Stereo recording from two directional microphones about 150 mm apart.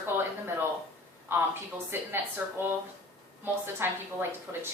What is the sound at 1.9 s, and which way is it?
Speech, 15° right (ahead or behind).